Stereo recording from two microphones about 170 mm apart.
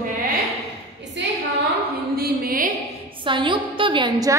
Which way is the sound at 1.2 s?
90° right.